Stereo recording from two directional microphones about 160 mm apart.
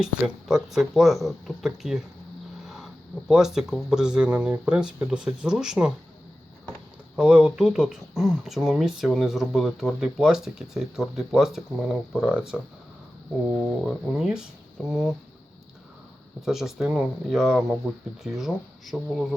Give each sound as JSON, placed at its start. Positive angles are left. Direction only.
{"t": 0.0, "sound": "speech", "side_deg": 0}
{"t": 7.2, "sound": "speech", "side_deg": -5}
{"t": 13.8, "sound": "speech", "side_deg": 0}
{"t": 16.5, "sound": "speech", "side_deg": -5}